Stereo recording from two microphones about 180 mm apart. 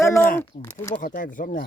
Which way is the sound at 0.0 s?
15° left (ahead or behind).